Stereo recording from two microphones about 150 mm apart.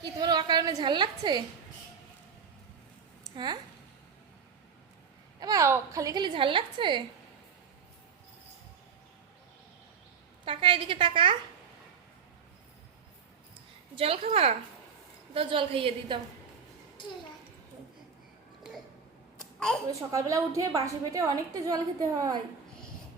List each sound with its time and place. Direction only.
0.0 s a woman's voice: 25° right (ahead or behind)
3.2 s speech: 30° right (ahead or behind)
5.4 s a woman's voice: 25° right (ahead or behind)
10.4 s a woman's voice: 35° right (ahead or behind)
13.9 s a woman's voice: 40° right (ahead or behind)
19.9 s a woman's voice: 20° right (ahead or behind)